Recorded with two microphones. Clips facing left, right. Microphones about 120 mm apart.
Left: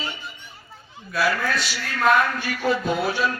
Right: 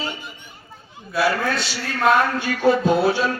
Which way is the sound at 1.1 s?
20° right (ahead or behind).